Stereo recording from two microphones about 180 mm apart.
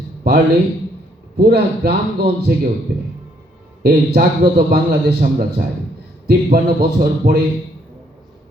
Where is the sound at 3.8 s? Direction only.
60° right (ahead or behind).